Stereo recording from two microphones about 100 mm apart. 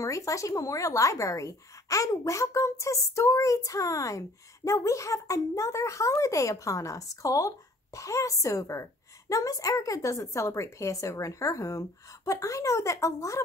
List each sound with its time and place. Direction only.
0.0 s speech: 30° left (ahead or behind)